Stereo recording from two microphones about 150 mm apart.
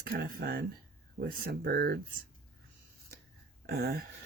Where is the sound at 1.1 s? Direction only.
80° right.